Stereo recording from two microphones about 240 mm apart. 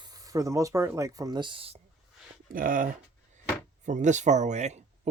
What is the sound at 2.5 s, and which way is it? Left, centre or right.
Speech, right.